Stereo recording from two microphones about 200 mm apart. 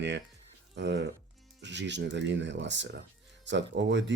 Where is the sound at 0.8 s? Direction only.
60° right (ahead or behind).